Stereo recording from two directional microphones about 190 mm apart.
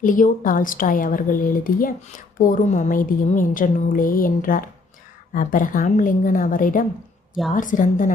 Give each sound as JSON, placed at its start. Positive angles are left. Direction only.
{"t": 0.0, "sound": "a woman's voice", "side_deg": 45}